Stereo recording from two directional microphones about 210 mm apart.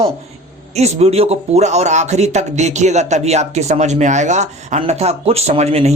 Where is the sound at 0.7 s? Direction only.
30° right (ahead or behind).